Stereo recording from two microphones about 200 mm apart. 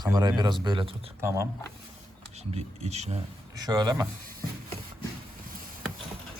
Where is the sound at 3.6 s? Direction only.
20° right (ahead or behind).